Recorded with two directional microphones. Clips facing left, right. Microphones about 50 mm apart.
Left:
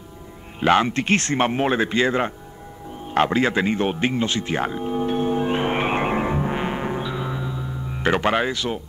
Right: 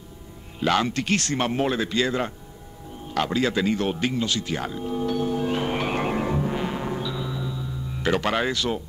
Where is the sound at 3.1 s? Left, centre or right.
Left; by 8.8 s centre.